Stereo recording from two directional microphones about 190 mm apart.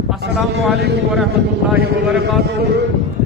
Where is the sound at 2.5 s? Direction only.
60° right (ahead or behind).